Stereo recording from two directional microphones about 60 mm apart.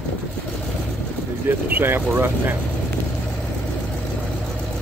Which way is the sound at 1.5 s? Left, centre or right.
Right.